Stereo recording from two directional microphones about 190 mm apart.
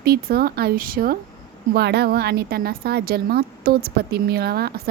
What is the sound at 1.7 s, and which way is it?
A woman's voice, 60° right (ahead or behind).